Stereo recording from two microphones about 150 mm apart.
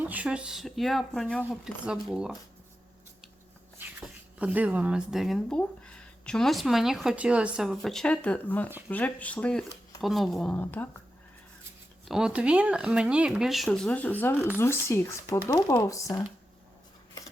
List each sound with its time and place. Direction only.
0.0 s speech: 10° right (ahead or behind)
4.0 s speech: 10° right (ahead or behind); by 10.8 s 10° left (ahead or behind)
12.0 s speech: 5° right (ahead or behind); by 16.2 s 20° left (ahead or behind)